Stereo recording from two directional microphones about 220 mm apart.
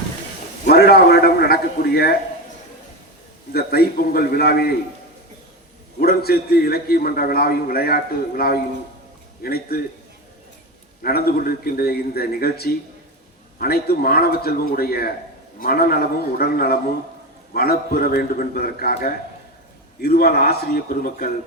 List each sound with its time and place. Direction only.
0.7 s a man's voice: 45° left (ahead or behind)
3.5 s a man's voice: 45° left (ahead or behind)
6.0 s a man's voice: 45° left (ahead or behind)
11.0 s a man's voice: 45° left (ahead or behind)